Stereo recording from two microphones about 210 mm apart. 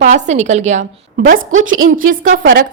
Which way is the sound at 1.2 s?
70° right (ahead or behind).